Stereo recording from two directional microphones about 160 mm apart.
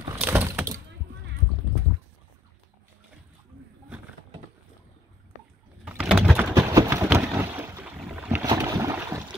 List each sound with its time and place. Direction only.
0.1 s a sound: 15° right (ahead or behind)
5.9 s pigeon: 5° right (ahead or behind)
6.5 s boat: 20° right (ahead or behind)
8.5 s boat: 20° right (ahead or behind)